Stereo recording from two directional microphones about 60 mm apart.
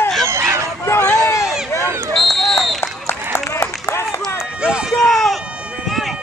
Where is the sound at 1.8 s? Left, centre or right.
Right.